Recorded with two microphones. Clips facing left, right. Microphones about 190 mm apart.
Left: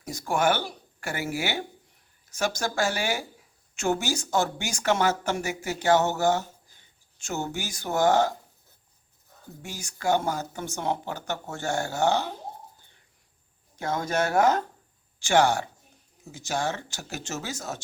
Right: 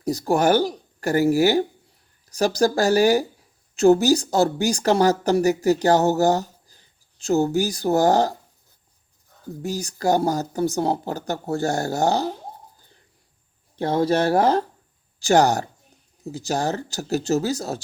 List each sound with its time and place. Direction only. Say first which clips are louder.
0.0 s speech: right 6 dB; 35° right (ahead or behind)
9.6 s speech: right 12 dB; 35° right (ahead or behind)
13.7 s speech: right 7 dB; 30° right (ahead or behind)